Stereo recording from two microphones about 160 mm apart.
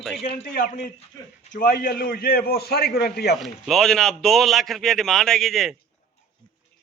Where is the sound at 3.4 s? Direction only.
Centre (ahead or behind).